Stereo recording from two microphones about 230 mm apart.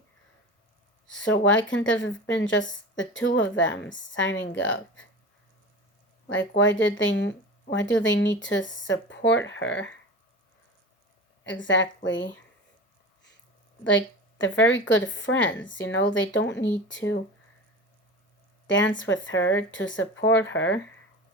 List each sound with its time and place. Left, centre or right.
1.0 s speech: left
6.6 s speech: left
11.4 s speech: left
13.8 s speech: left
18.7 s speech: left